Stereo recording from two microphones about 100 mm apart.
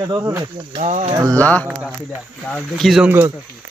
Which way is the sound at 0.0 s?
35° right (ahead or behind).